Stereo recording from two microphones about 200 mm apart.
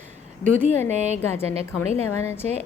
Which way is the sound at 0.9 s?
35° right (ahead or behind).